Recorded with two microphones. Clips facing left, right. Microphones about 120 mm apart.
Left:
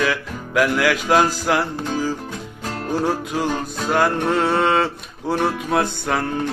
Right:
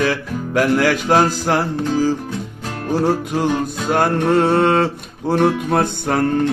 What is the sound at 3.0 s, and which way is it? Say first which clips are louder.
Music: right 5 dB; 50° right (ahead or behind).